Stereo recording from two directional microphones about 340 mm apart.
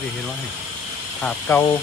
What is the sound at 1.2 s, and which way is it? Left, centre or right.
Speech, centre.